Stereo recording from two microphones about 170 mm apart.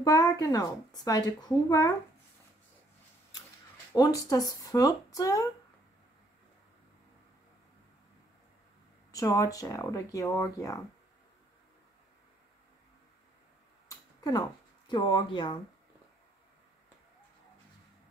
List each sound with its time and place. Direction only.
0.0 s a woman's voice: 20° left (ahead or behind)
3.9 s a woman's voice: 20° left (ahead or behind)
9.1 s a woman's voice: 20° left (ahead or behind)
13.8 s a sound: 20° left (ahead or behind)
14.9 s a woman's voice: 25° left (ahead or behind)